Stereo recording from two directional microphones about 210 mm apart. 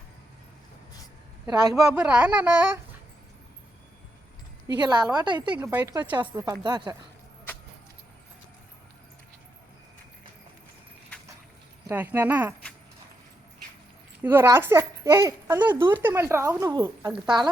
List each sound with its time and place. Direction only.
1.5 s a child's voice: 20° right (ahead or behind)
1.7 s a child's voice: 5° right (ahead or behind)
4.8 s a woman's voice: 20° right (ahead or behind)
11.9 s a child's voice: 10° right (ahead or behind)
14.2 s a child's voice: 10° right (ahead or behind)